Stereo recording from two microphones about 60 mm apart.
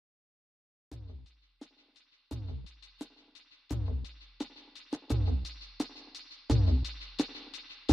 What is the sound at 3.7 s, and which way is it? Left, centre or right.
Music, centre.